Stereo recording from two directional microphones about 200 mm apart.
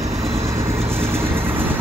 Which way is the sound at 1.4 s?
10° right (ahead or behind).